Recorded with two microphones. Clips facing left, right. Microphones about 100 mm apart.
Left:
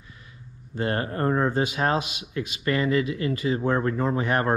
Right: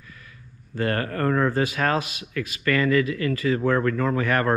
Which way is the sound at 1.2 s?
90° right.